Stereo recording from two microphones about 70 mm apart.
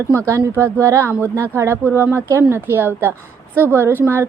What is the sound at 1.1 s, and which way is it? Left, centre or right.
Speech, right.